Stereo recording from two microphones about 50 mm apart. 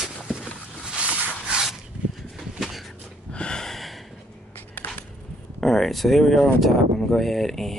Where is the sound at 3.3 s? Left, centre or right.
Centre.